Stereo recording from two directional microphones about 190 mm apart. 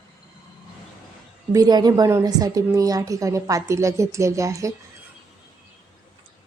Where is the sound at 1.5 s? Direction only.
20° right (ahead or behind).